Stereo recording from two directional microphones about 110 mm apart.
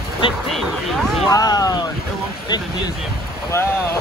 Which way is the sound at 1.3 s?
35° left (ahead or behind).